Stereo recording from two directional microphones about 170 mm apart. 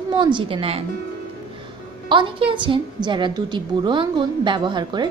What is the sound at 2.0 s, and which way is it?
A woman's voice, 30° right (ahead or behind).